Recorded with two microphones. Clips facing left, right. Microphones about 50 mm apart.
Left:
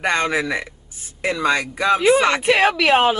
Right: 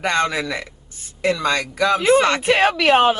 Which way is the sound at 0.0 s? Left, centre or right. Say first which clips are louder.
Even; centre.